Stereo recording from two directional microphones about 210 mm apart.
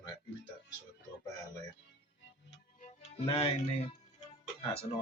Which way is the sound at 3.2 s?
25° left (ahead or behind).